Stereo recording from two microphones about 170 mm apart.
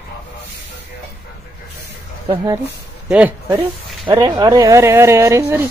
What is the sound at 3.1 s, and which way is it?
Speech, 10° right (ahead or behind).